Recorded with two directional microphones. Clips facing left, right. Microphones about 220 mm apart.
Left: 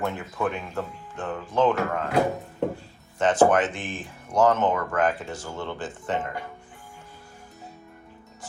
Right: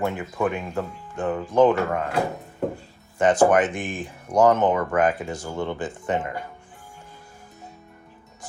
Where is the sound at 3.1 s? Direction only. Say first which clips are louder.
Right 2 dB; 15° right (ahead or behind).